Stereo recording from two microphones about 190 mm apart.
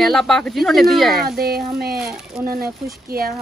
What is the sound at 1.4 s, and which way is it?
Speech, 55° right (ahead or behind).